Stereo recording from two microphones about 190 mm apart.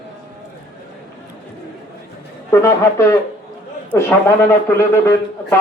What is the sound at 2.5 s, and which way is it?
Speech, 15° left (ahead or behind).